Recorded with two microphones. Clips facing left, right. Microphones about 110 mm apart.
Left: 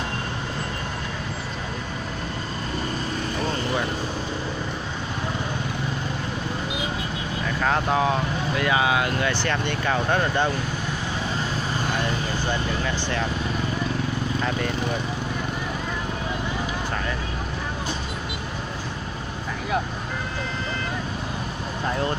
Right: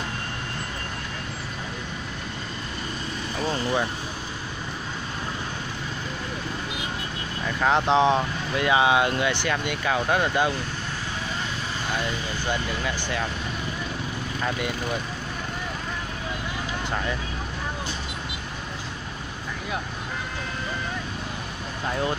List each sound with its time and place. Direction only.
7.6 s speech: 20° right (ahead or behind)
12.4 s speech: 10° right (ahead or behind)